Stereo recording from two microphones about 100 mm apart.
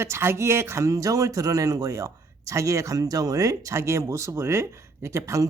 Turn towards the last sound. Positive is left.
turn(degrees=-30)  # may be behind; listen again after turning